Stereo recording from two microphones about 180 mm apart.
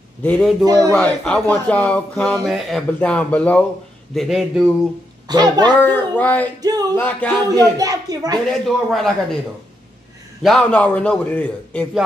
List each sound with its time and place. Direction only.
0.2 s a man's voice: 5° left (ahead or behind)
0.7 s a woman's voice: 20° right (ahead or behind)
0.9 s a man's voice: 5° left (ahead or behind)
5.3 s a woman's voice: 25° right (ahead or behind)
5.8 s speech: 10° left (ahead or behind)
6.6 s a woman's voice: 20° right (ahead or behind)
7.0 s speech: 10° left (ahead or behind)
7.7 s a woman's voice: 20° right (ahead or behind)
8.6 s a man's voice: centre (ahead or behind)
10.4 s a man's voice: 5° left (ahead or behind)